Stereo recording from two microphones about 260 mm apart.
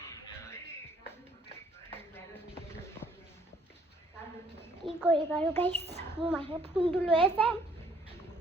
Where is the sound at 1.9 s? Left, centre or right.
Centre.